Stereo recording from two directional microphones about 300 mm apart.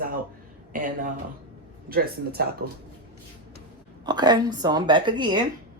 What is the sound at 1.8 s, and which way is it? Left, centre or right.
Speech, right.